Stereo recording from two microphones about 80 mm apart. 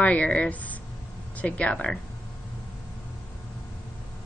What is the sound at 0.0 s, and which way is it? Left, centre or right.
A woman's voice, centre.